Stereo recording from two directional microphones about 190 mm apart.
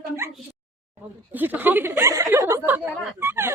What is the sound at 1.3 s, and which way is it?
Speech, 10° right (ahead or behind).